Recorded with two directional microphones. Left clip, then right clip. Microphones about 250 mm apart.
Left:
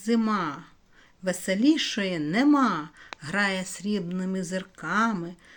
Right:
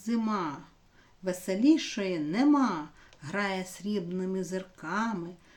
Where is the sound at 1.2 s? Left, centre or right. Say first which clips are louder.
Left 2 dB; centre.